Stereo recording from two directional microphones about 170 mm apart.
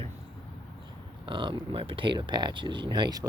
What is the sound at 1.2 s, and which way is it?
Speech, 30° right (ahead or behind).